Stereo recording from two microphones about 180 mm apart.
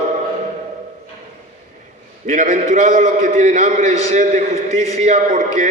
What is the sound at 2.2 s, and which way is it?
A man's voice, 45° right (ahead or behind).